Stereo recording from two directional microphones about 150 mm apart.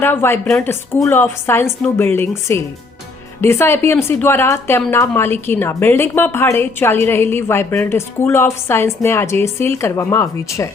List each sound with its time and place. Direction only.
0.0 s speech: 15° left (ahead or behind)